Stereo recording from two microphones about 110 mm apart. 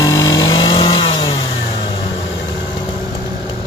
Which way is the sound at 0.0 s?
30° left (ahead or behind).